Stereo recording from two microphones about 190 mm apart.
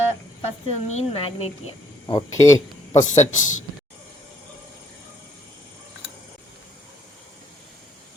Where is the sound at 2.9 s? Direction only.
35° left (ahead or behind).